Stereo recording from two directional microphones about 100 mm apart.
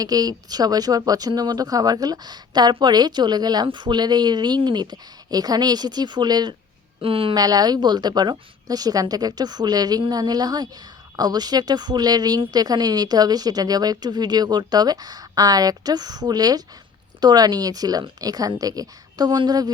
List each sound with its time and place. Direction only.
0.0 s speech: 40° right (ahead or behind)
7.0 s speech: 65° right (ahead or behind)
7.3 s speech: 40° right (ahead or behind)